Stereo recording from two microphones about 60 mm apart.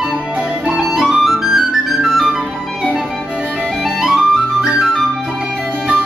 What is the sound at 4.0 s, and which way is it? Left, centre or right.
Music, centre.